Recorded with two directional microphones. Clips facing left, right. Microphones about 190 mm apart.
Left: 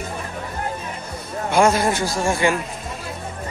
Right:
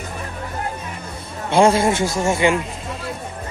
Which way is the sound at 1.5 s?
25° right (ahead or behind).